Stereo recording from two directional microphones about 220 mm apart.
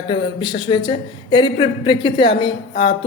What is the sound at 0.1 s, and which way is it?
Speech, 20° left (ahead or behind).